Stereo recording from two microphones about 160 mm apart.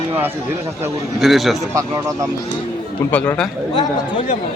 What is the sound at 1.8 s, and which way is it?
Speech, 20° right (ahead or behind).